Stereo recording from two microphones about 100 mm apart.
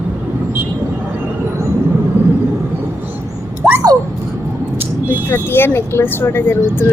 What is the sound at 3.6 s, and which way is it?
Dog, 10° right (ahead or behind).